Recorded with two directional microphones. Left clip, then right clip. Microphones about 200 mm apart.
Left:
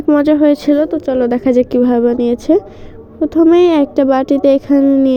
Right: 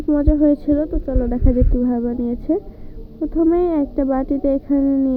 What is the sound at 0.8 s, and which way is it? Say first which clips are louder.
Speech: left 8 dB; 40° left (ahead or behind).